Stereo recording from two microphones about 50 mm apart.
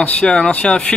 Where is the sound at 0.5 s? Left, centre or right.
Left.